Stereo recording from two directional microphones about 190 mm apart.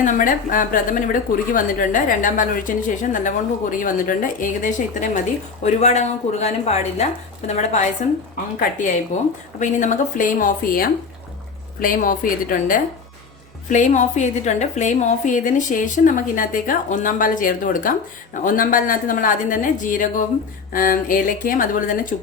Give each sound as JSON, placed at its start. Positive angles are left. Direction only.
{"t": 0.0, "sound": "a woman's voice", "side_deg": 45}
{"t": 9.1, "sound": "a woman's voice", "side_deg": 40}